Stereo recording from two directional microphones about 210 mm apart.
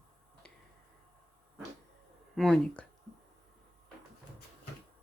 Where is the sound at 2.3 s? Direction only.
Centre (ahead or behind).